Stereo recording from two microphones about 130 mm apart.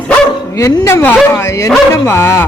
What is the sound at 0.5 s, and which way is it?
Speech, 25° left (ahead or behind).